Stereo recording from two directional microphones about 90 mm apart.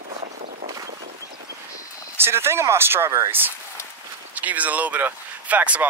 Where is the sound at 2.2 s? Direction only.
30° right (ahead or behind).